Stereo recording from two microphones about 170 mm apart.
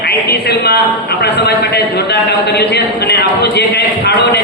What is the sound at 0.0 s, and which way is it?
A woman's voice, 70° left (ahead or behind).